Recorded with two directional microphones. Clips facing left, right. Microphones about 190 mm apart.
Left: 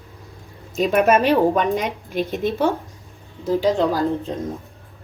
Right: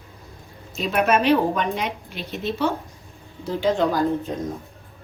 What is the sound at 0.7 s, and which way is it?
A woman's voice, 45° left (ahead or behind).